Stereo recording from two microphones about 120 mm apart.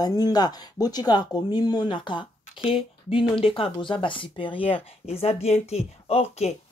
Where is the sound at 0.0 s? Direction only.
35° left (ahead or behind).